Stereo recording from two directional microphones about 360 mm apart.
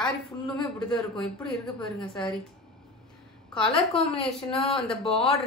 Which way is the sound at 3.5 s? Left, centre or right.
Centre.